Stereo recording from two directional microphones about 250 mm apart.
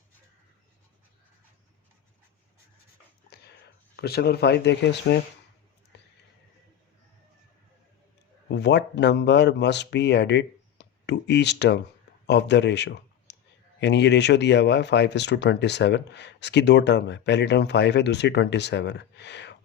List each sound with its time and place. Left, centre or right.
3.2 s dog: left
3.9 s speech: left
5.9 s a sound: left
8.4 s speech: left